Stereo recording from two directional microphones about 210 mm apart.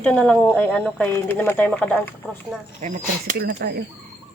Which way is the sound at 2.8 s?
35° right (ahead or behind).